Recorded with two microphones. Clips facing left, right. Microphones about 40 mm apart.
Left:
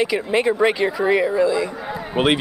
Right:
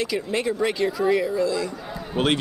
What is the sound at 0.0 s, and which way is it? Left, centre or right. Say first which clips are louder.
Speech: left 6 dB; left.